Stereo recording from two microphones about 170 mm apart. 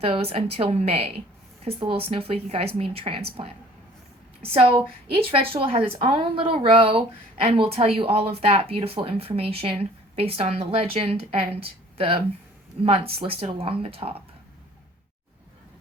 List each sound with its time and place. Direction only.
0.0 s speech: 35° right (ahead or behind)